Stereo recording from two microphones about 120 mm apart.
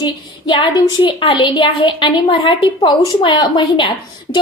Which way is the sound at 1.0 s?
45° left (ahead or behind).